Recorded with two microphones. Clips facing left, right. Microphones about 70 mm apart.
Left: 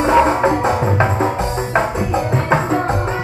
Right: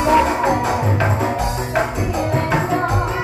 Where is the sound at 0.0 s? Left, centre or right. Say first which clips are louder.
Left 2 dB; left.